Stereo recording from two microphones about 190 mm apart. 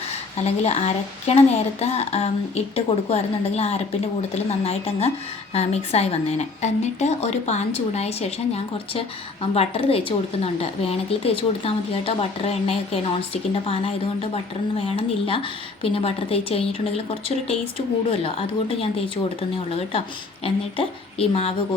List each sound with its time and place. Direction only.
0.4 s a woman's voice: 35° left (ahead or behind)